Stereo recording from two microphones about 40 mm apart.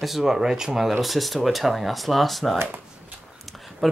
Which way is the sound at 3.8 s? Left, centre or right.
Centre.